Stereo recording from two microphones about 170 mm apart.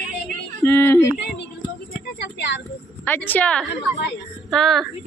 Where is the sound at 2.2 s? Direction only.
90° left.